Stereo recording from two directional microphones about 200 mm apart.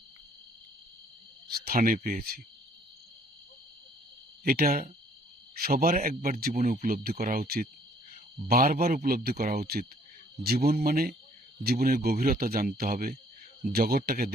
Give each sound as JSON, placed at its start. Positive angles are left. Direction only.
{"t": 1.5, "sound": "speech", "side_deg": -50}
{"t": 4.4, "sound": "speech", "side_deg": -50}